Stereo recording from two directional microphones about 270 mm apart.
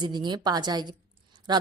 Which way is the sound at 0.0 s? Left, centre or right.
Centre.